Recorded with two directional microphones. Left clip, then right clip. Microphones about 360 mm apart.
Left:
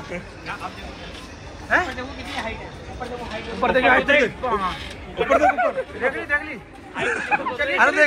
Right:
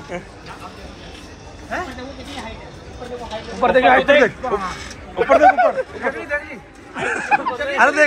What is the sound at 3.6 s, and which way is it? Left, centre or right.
Speech, right.